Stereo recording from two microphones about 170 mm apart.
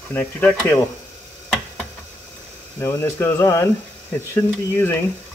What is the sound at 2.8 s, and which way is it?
Speech, 15° left (ahead or behind).